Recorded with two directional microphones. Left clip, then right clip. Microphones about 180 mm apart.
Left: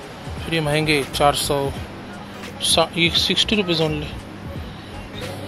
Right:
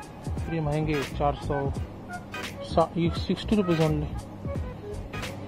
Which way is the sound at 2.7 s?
25° right (ahead or behind).